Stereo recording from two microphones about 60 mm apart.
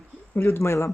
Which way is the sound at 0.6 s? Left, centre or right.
Left.